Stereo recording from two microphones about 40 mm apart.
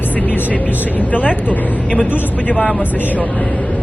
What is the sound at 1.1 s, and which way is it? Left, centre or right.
Speech, left.